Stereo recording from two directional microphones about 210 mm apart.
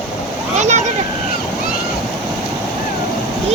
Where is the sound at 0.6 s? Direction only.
35° right (ahead or behind).